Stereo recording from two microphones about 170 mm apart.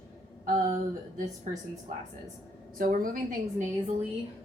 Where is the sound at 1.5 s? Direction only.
45° right (ahead or behind).